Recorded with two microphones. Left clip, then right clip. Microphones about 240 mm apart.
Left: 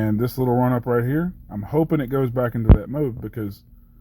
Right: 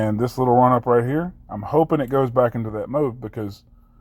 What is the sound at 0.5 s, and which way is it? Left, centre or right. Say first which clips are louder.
Speech: right 7 dB; right.